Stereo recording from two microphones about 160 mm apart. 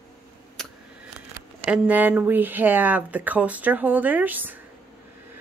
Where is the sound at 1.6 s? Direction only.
10° right (ahead or behind).